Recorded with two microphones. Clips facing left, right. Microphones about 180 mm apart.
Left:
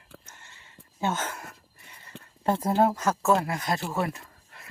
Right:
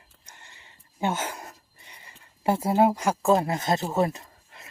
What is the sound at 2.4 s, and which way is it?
Speech, 10° right (ahead or behind).